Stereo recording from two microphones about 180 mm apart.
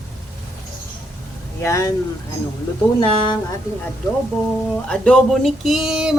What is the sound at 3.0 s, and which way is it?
Speech, 25° left (ahead or behind).